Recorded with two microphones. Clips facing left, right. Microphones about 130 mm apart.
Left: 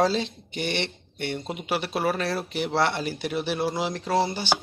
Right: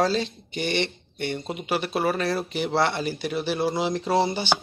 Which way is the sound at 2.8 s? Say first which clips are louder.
Even; 5° left (ahead or behind).